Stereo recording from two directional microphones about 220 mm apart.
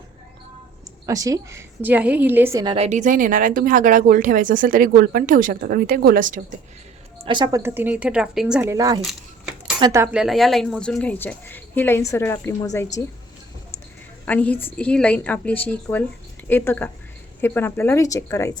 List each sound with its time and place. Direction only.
1.0 s a woman's voice: 15° right (ahead or behind)
2.7 s speech: 30° right (ahead or behind)
7.3 s a woman's voice: 20° right (ahead or behind); by 13.1 s 10° left (ahead or behind)
14.3 s speech: 5° left (ahead or behind)